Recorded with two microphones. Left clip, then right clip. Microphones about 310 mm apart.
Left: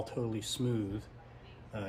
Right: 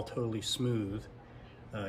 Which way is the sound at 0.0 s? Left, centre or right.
Centre.